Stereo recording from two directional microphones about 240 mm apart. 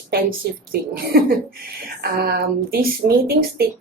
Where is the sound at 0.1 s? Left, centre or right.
Right.